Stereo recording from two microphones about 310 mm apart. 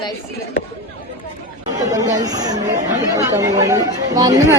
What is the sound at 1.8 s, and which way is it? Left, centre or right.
A woman's voice, centre.